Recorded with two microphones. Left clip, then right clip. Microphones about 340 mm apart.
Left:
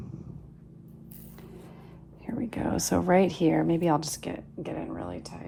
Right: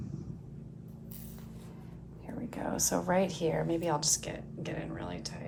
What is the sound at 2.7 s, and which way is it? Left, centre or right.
A woman's voice, left.